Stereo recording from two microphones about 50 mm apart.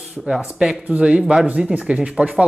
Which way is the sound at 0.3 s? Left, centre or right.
Centre.